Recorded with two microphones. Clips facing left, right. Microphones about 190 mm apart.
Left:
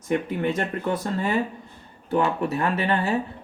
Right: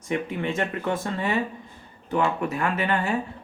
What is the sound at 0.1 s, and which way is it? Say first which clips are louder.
Speech: left 3 dB; 40° left (ahead or behind).